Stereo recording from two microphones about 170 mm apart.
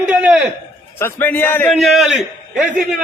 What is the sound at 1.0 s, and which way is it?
Speech, 10° left (ahead or behind).